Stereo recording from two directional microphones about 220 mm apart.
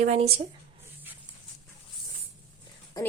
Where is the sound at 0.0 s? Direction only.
30° right (ahead or behind).